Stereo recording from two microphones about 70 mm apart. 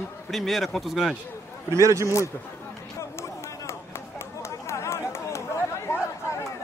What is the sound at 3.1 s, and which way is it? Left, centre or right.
Run, left.